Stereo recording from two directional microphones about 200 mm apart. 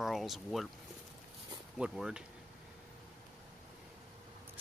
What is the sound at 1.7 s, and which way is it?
Speech, 5° right (ahead or behind).